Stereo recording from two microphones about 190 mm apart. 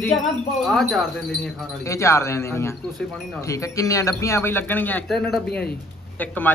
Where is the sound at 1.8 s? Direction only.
15° left (ahead or behind).